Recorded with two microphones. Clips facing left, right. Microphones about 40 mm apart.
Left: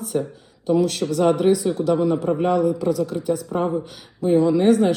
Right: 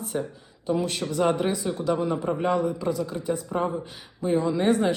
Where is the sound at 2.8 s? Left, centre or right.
Right.